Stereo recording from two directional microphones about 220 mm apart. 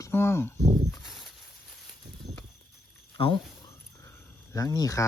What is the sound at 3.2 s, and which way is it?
Speech, 20° left (ahead or behind).